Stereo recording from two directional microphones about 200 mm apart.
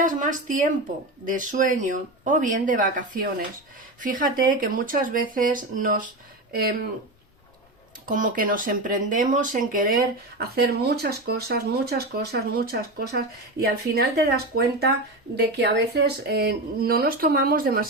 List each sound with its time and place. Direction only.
0.0 s speech: 40° right (ahead or behind)
8.0 s speech: 40° right (ahead or behind)